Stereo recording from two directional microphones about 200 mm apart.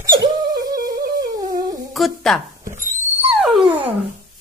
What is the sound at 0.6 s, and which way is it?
Music, 20° right (ahead or behind).